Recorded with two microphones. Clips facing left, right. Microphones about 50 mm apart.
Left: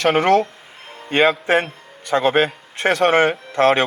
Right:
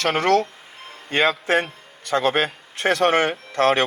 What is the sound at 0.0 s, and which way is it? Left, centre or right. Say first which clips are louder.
Speech: left 4 dB; centre.